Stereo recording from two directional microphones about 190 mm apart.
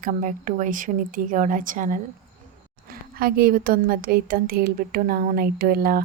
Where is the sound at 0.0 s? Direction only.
40° right (ahead or behind).